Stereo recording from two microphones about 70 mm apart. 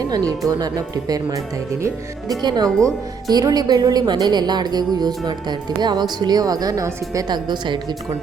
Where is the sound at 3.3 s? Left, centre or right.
Right.